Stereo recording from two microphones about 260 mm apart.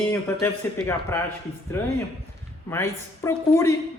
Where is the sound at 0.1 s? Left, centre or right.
Centre.